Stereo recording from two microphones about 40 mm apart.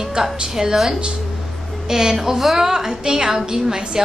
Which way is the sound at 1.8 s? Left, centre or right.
Centre.